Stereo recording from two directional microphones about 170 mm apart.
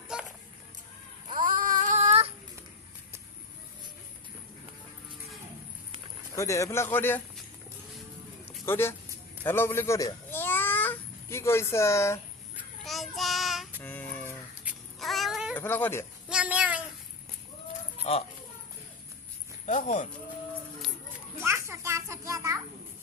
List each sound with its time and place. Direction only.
1.3 s a sound: 50° right (ahead or behind)
6.3 s speech: 20° left (ahead or behind)
8.6 s a child's voice: 15° left (ahead or behind)
12.8 s child singing: centre (ahead or behind)
13.8 s a sound: 10° left (ahead or behind)
14.6 s cat: centre (ahead or behind)
15.5 s speech: 10° left (ahead or behind)
16.3 s a sound: 5° right (ahead or behind)
18.1 s speech: 35° left (ahead or behind)
19.6 s speech: 45° left (ahead or behind)
21.3 s children playing: 15° right (ahead or behind)